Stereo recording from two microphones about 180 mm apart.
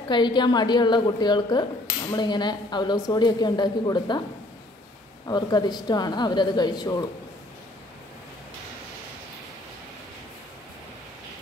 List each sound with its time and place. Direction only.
0.1 s speech: 25° left (ahead or behind)
5.2 s speech: 25° left (ahead or behind)